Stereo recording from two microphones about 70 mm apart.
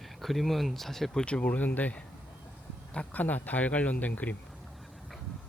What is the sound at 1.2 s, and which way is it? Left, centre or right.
Speech, centre.